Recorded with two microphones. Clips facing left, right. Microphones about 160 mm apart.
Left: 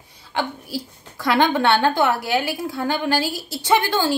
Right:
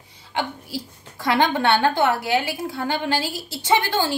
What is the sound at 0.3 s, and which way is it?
A woman's voice, 20° right (ahead or behind).